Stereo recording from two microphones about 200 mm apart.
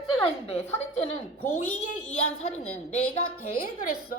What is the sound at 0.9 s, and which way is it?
A woman's voice, 30° left (ahead or behind).